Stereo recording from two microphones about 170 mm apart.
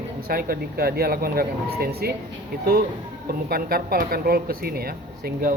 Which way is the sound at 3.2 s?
60° right (ahead or behind).